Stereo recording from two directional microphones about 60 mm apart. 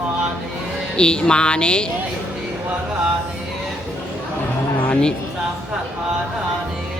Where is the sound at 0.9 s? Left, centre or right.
Centre.